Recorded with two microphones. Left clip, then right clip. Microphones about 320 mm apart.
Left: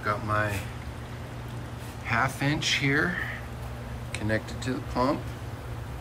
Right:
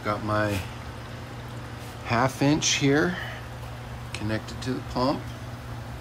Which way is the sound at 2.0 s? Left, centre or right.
Centre.